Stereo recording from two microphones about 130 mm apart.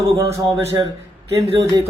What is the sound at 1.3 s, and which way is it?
Speech, 25° right (ahead or behind).